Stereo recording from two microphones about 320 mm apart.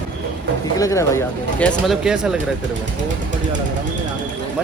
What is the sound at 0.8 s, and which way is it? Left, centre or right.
Speech, centre.